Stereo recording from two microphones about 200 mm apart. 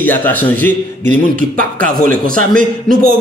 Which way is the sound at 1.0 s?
40° right (ahead or behind).